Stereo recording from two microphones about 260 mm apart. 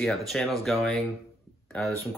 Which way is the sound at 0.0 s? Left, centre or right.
Centre.